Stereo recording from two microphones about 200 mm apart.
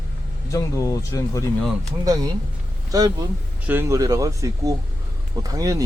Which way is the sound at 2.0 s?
20° right (ahead or behind).